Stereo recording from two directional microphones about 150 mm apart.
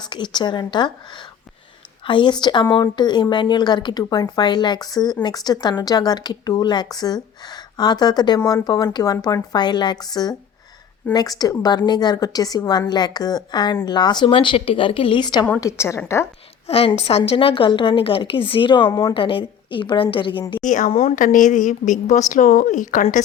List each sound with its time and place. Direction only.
0.0 s a woman's voice: 30° left (ahead or behind)
15.4 s a woman's voice: 15° left (ahead or behind)
16.6 s a woman's voice: 40° left (ahead or behind)
20.7 s a woman's voice: 60° left (ahead or behind)